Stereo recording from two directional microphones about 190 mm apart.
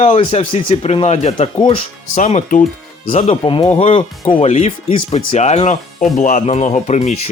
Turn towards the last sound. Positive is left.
turn(degrees=35)  # may be behind; listen again after turning